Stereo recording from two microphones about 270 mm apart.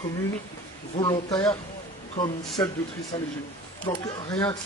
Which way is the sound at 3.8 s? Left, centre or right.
Centre.